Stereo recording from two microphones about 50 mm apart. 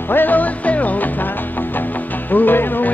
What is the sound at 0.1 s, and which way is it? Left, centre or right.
Music, left.